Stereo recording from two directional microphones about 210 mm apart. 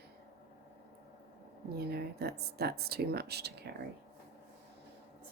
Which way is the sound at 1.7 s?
50° right (ahead or behind).